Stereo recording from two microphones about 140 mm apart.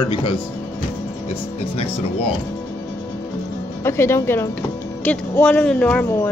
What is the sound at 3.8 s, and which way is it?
Speech, 20° left (ahead or behind).